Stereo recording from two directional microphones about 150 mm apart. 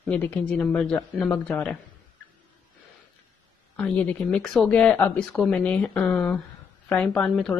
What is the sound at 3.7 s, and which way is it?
A woman's voice, 10° left (ahead or behind).